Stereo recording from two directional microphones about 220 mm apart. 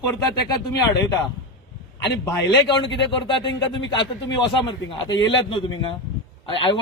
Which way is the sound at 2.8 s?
55° left (ahead or behind).